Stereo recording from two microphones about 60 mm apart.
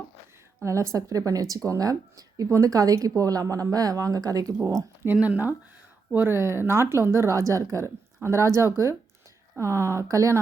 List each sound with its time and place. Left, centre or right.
0.6 s speech: right
5.1 s speech: right
6.1 s speech: right
8.2 s speech: right